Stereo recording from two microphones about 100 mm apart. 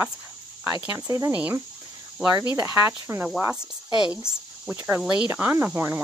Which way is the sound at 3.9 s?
10° right (ahead or behind).